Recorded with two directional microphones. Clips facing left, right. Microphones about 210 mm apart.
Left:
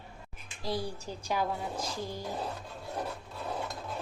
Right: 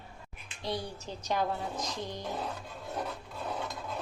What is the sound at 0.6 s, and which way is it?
A woman's voice, 5° left (ahead or behind).